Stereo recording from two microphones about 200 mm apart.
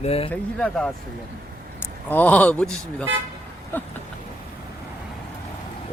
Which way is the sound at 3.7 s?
10° left (ahead or behind).